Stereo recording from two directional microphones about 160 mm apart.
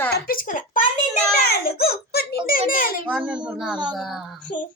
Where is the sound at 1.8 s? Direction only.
80° left; by 3.0 s 60° left (ahead or behind).